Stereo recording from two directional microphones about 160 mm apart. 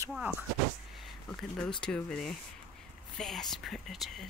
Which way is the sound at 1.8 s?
5° left (ahead or behind).